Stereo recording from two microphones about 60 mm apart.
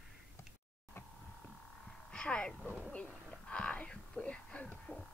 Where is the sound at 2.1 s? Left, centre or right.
Centre.